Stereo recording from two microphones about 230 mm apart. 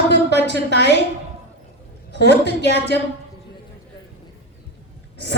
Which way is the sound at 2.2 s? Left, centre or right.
Left.